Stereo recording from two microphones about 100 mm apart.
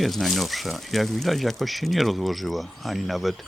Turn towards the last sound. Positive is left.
turn(degrees=0)  # may be behind; listen again after turning